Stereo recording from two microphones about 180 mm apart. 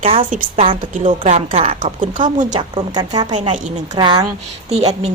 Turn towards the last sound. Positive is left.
turn(degrees=-35)  # may be behind; listen again after turning